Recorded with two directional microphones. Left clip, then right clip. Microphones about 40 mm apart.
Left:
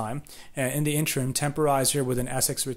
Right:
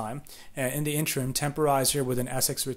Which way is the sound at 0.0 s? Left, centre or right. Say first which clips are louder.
Left 2 dB; left.